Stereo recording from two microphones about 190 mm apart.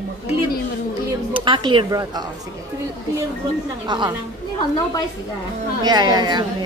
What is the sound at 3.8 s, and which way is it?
Speech, 25° right (ahead or behind).